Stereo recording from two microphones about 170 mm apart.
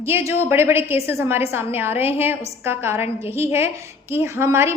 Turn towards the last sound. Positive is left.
turn(degrees=-15)  # may be behind; listen again after turning